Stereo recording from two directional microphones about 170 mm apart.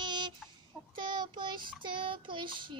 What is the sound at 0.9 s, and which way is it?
Child singing, 25° right (ahead or behind).